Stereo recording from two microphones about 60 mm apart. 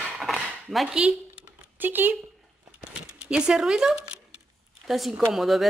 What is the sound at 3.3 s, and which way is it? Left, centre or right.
Speech, centre.